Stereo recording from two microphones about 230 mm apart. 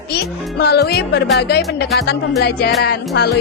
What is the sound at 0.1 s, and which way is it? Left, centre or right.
Music, left.